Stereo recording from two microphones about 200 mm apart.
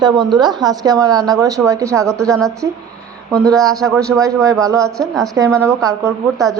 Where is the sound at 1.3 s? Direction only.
15° right (ahead or behind).